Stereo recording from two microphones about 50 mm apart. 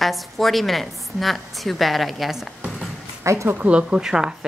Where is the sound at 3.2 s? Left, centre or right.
Right.